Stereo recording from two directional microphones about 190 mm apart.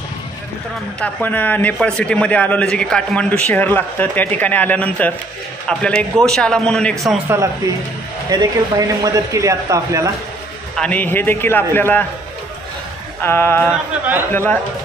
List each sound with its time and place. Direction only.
1.0 s a man's voice: 10° left (ahead or behind)
8.3 s speech: 20° right (ahead or behind)
10.8 s a man's voice: 10° left (ahead or behind)
13.2 s a man's voice: 10° left (ahead or behind)